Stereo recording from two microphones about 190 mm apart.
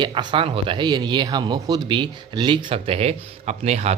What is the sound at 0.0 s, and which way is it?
Speech, 25° right (ahead or behind).